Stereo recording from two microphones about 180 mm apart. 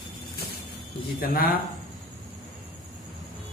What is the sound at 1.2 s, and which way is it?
Speech, 55° left (ahead or behind).